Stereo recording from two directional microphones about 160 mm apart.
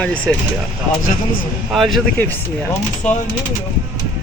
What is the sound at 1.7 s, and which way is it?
Speech, centre (ahead or behind).